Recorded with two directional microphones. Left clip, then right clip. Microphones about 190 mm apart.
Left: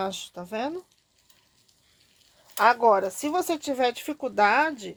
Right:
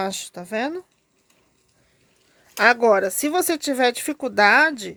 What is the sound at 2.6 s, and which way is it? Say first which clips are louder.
Speech: right 3 dB; 45° right (ahead or behind).